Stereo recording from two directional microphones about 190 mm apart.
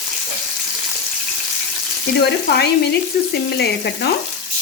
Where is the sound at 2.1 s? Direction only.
60° left (ahead or behind).